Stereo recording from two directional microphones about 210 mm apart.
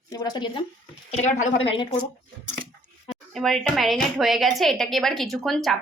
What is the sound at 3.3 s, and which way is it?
A woman's voice, centre (ahead or behind).